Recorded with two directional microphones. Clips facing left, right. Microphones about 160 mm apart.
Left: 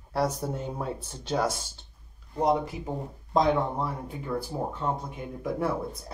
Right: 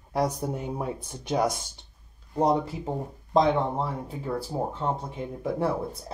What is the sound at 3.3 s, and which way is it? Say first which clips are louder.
Speech: right 2 dB; 25° right (ahead or behind).